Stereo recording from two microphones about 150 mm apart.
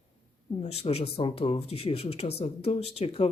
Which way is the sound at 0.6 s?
45° left (ahead or behind).